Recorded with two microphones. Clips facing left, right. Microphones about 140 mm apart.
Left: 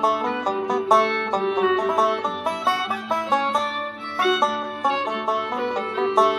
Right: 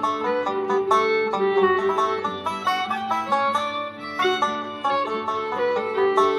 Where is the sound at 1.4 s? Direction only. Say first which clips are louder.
Right 1 dB; 55° right (ahead or behind).